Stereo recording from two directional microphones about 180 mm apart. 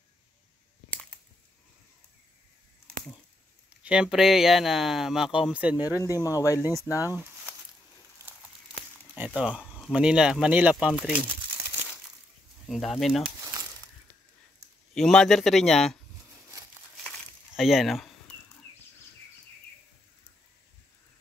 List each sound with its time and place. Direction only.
3.8 s speech: 5° right (ahead or behind)
6.0 s speech: 20° left (ahead or behind)
7.1 s a sound: 10° right (ahead or behind)
8.2 s crumpling: 15° right (ahead or behind)
9.1 s speech: 10° right (ahead or behind)
12.6 s speech: centre (ahead or behind)
15.0 s speech: 5° left (ahead or behind)
17.6 s speech: centre (ahead or behind)